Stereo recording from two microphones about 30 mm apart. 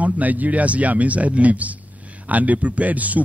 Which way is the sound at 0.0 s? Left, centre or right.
Right.